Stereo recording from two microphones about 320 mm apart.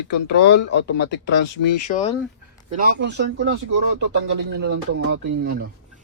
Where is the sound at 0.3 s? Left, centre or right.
Left.